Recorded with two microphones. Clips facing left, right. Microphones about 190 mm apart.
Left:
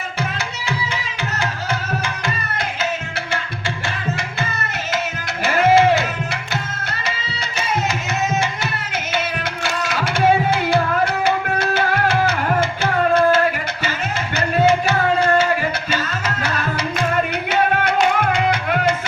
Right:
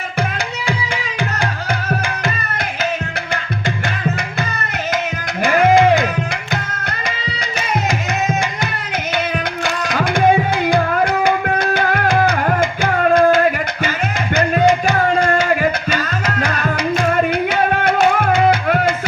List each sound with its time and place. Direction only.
5.7 s music: 15° right (ahead or behind)
10.0 s music: 15° right (ahead or behind)
14.3 s a sound: 15° right (ahead or behind)
15.9 s music: 15° right (ahead or behind)
17.9 s music: 45° right (ahead or behind)